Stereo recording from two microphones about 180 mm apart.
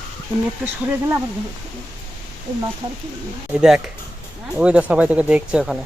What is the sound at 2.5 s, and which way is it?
Speech, 20° right (ahead or behind).